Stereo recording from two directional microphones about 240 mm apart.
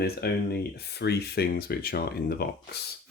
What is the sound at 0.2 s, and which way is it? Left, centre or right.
Speech, left.